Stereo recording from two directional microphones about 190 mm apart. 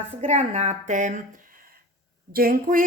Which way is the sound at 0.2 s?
35° right (ahead or behind).